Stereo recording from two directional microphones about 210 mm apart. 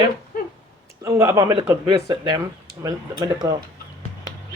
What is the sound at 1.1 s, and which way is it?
Speech, 15° right (ahead or behind).